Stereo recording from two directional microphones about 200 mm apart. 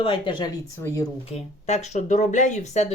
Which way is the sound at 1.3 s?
35° left (ahead or behind).